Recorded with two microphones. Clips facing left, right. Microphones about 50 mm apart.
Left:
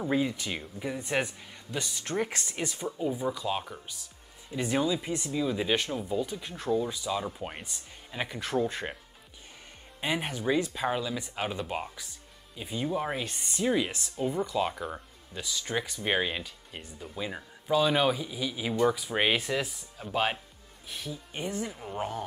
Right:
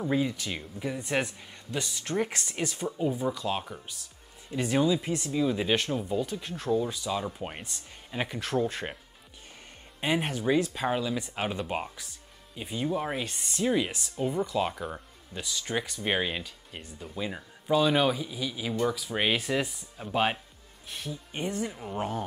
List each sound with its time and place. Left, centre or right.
0.0 s speech: centre
8.4 s speech: centre
9.9 s speech: centre
19.5 s speech: centre